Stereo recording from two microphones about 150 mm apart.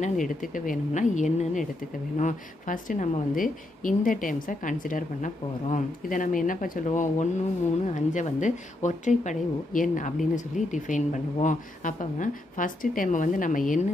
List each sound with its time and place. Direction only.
0.0 s speech: 60° left (ahead or behind)